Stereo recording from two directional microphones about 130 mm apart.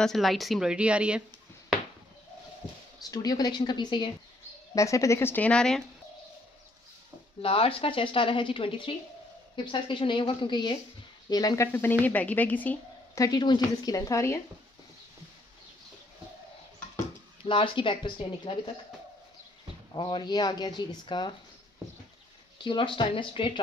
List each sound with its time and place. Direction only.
0.0 s speech: centre (ahead or behind)
3.1 s speech: 30° left (ahead or behind)
4.7 s a woman's voice: 25° left (ahead or behind); by 5.9 s 5° left (ahead or behind)
7.4 s a woman's voice: 45° left (ahead or behind); by 11.9 s 20° left (ahead or behind)
12.0 s a woman's voice: 10° left (ahead or behind)
13.1 s a woman's voice: 30° left (ahead or behind)
17.5 s speech: 40° left (ahead or behind)
19.9 s speech: 35° left (ahead or behind)
22.6 s speech: 40° left (ahead or behind)